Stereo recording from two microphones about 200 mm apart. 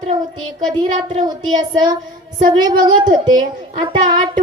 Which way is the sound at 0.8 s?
20° right (ahead or behind).